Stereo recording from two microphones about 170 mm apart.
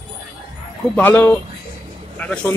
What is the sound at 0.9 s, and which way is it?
A man's voice, 10° left (ahead or behind).